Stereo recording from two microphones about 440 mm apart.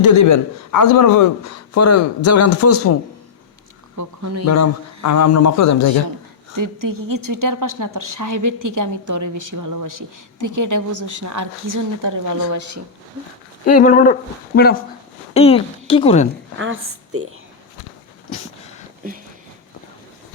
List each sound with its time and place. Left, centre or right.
0.2 s speech: left
3.9 s speech: right
4.4 s speech: left
6.6 s a woman's voice: right
13.7 s a woman's voice: centre
16.6 s a woman's voice: right
19.0 s a woman's voice: centre